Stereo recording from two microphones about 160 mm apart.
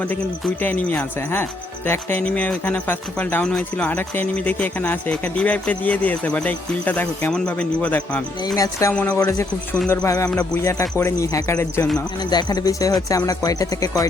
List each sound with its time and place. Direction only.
0.1 s speech: 10° left (ahead or behind)
8.5 s speech: 20° left (ahead or behind)
9.0 s speech: 10° left (ahead or behind)
9.9 s speech: 20° left (ahead or behind)